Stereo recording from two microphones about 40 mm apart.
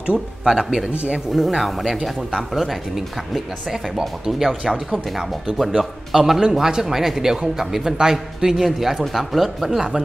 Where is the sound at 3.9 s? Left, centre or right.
Centre.